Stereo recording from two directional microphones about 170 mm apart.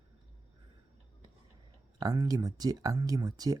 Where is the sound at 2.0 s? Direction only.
20° right (ahead or behind).